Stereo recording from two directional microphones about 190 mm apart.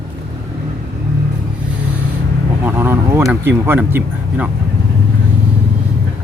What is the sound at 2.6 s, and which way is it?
Speech, 10° right (ahead or behind).